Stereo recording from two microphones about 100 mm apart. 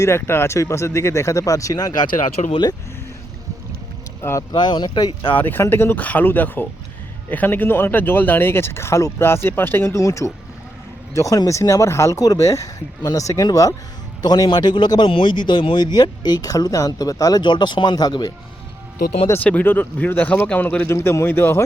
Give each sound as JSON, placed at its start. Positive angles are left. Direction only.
{"t": 0.0, "sound": "speech", "side_deg": 25}
{"t": 2.4, "sound": "speech", "side_deg": 75}
{"t": 4.2, "sound": "speech", "side_deg": 30}
{"t": 4.5, "sound": "a man's voice", "side_deg": 50}
{"t": 5.3, "sound": "a man's voice", "side_deg": 20}
{"t": 19.4, "sound": "speech", "side_deg": 15}
{"t": 20.8, "sound": "speech", "side_deg": 25}